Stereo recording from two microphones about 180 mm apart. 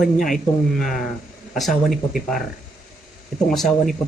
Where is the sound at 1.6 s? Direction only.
Centre (ahead or behind).